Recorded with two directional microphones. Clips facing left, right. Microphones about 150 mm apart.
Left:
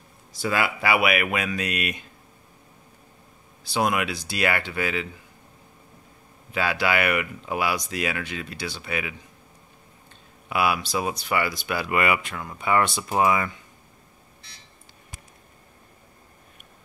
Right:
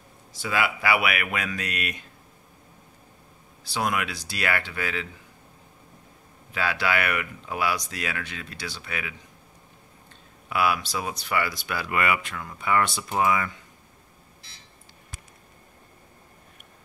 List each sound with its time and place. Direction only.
0.4 s speech: 40° left (ahead or behind)
0.8 s speech: 25° left (ahead or behind)
3.7 s speech: 20° left (ahead or behind)
6.5 s speech: 20° left (ahead or behind)
10.5 s speech: 15° left (ahead or behind)